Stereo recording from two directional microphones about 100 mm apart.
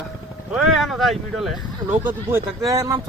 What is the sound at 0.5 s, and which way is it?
Speech, 5° right (ahead or behind).